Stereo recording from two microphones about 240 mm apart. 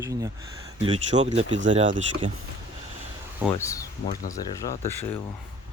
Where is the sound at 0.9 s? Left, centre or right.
Right.